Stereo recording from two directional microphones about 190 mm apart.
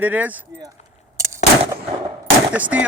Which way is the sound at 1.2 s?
15° right (ahead or behind).